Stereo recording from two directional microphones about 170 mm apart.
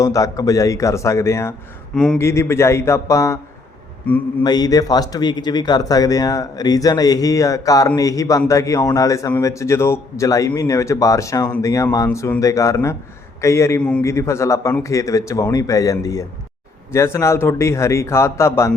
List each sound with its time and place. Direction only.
0.0 s a man's voice: 20° left (ahead or behind)
4.4 s a man's voice: 25° left (ahead or behind)